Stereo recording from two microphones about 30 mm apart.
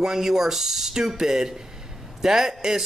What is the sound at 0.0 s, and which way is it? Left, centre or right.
Speech, centre.